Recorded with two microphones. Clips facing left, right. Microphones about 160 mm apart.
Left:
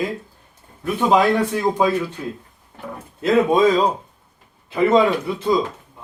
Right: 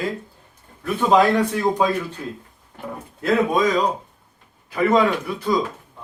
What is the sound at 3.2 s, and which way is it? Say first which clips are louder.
A man's voice: left 4 dB; 25° left (ahead or behind).